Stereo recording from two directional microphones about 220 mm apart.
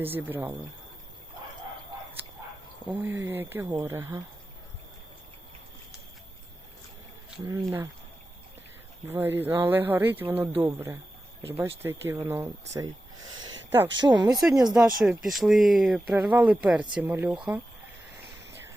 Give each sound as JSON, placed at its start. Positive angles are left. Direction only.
{"t": 0.0, "sound": "speech", "side_deg": -10}
{"t": 2.9, "sound": "speech", "side_deg": -10}
{"t": 7.4, "sound": "speech", "side_deg": -15}
{"t": 9.0, "sound": "speech", "side_deg": -10}
{"t": 15.0, "sound": "speech", "side_deg": 0}